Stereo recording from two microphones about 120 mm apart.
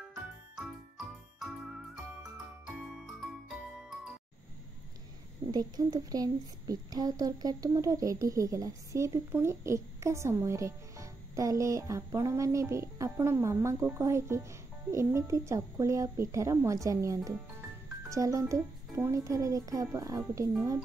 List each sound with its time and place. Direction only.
0.1 s jingle: 5° right (ahead or behind)
5.5 s a child's voice: 30° right (ahead or behind)